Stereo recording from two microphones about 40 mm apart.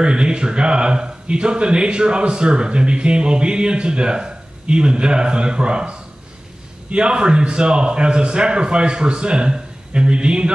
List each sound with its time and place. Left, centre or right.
0.0 s speech: right